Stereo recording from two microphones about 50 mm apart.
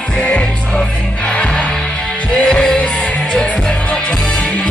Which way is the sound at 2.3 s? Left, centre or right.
Centre.